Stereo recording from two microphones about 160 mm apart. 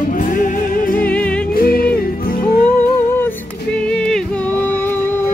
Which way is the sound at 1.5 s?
70° left (ahead or behind).